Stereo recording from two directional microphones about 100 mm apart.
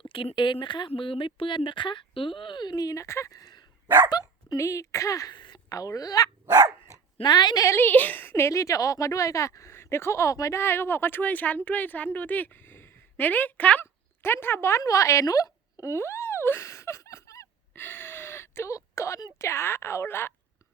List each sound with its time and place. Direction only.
0.1 s speech: 60° left (ahead or behind); by 5.3 s 35° left (ahead or behind)
5.3 s a sound: 50° left (ahead or behind)
5.6 s speech: 35° left (ahead or behind)
6.4 s dog: 30° right (ahead or behind)
7.2 s speech: 45° left (ahead or behind)
7.8 s a woman's voice: 20° left (ahead or behind)